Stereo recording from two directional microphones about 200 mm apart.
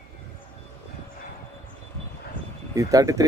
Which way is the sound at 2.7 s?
15° right (ahead or behind).